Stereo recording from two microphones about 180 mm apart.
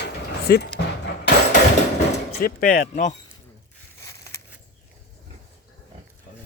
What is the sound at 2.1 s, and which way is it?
Speech, 60° left (ahead or behind).